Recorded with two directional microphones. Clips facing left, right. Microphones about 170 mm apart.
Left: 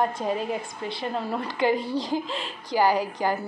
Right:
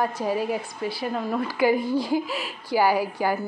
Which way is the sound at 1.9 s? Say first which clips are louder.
Right 3 dB; 10° right (ahead or behind).